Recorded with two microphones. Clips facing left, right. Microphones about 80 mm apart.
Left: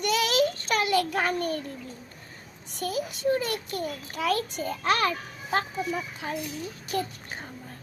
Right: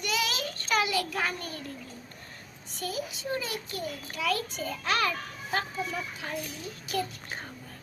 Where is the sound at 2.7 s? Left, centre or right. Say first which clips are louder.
Left 4 dB; left.